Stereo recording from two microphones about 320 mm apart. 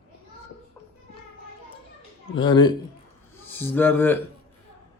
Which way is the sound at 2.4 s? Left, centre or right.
Centre.